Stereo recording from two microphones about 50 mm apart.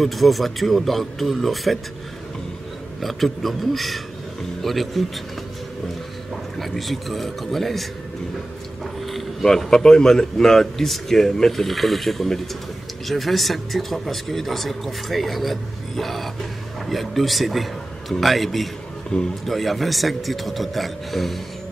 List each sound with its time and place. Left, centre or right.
0.0 s speech: centre
3.0 s a man's voice: centre
6.6 s speech: centre
9.0 s a man's voice: centre
19.1 s a man's voice: centre
19.4 s speech: centre